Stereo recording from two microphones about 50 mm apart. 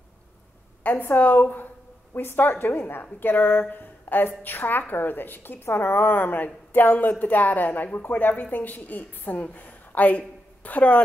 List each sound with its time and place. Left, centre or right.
1.1 s a woman's voice: left